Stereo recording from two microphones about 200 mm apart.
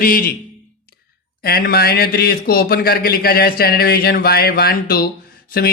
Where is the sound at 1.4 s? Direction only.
50° left (ahead or behind).